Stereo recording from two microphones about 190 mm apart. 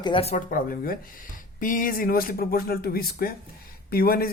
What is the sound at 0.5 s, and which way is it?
A man's voice, 50° left (ahead or behind).